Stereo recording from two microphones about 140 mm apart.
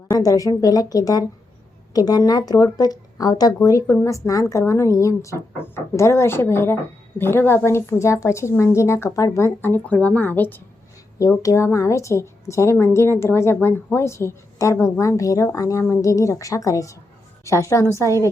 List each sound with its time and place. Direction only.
0.1 s a woman's voice: 25° left (ahead or behind)